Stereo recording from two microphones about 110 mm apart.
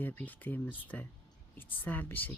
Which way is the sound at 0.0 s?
15° left (ahead or behind).